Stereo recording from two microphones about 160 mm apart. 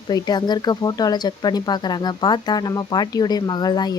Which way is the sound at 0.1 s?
25° left (ahead or behind).